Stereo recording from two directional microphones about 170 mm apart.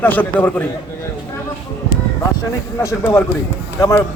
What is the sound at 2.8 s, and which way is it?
Speech, 15° left (ahead or behind).